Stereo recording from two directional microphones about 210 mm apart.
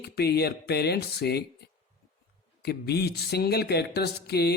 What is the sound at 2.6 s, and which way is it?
Speech, 50° left (ahead or behind).